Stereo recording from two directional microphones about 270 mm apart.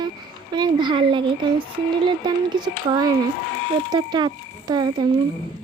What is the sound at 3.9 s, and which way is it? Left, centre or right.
Speech, centre.